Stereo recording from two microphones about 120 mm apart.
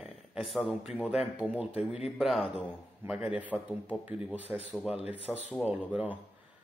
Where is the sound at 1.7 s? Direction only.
55° left (ahead or behind).